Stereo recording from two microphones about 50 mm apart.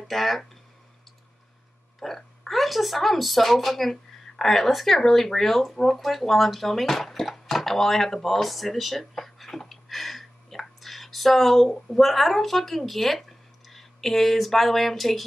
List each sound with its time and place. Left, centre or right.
0.1 s speech: centre
2.0 s a woman's voice: centre